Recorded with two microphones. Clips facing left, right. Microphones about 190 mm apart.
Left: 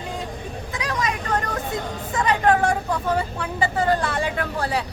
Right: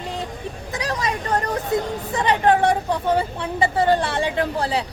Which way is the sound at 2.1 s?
30° right (ahead or behind).